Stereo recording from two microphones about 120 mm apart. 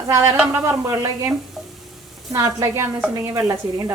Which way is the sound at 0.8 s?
30° right (ahead or behind).